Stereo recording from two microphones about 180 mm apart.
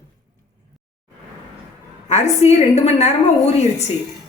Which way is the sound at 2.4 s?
40° left (ahead or behind).